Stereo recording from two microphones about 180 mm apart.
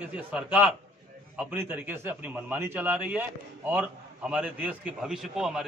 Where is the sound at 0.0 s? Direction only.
5° right (ahead or behind).